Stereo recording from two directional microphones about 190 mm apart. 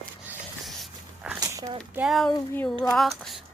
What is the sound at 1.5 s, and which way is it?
Speech, 20° right (ahead or behind).